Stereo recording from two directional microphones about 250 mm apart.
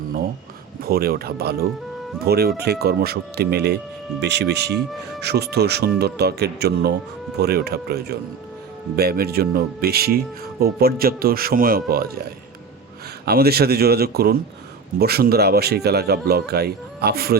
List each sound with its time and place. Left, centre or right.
0.8 s speech: right
13.2 s speech: right